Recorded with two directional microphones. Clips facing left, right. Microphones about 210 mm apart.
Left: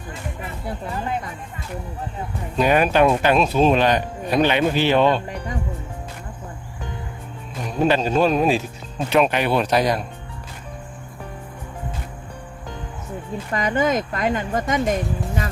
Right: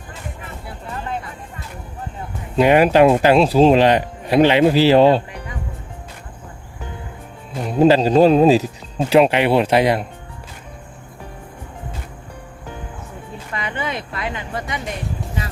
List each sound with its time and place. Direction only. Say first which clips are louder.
2.6 s a man's voice: right 5 dB; 25° right (ahead or behind)
7.8 s a man's voice: right 6 dB; 30° right (ahead or behind)
13.5 s speech: left 6 dB; 40° left (ahead or behind)